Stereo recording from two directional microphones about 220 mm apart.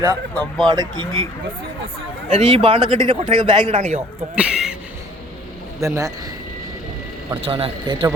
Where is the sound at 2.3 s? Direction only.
25° right (ahead or behind).